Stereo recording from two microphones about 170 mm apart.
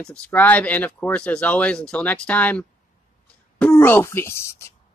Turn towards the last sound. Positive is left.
turn(degrees=15)  # may be behind; listen again after turning